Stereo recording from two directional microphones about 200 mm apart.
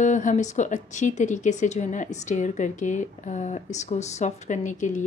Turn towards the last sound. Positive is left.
turn(degrees=40)  # may be behind; listen again after turning